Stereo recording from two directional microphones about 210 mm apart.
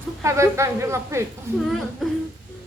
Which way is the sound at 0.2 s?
15° right (ahead or behind).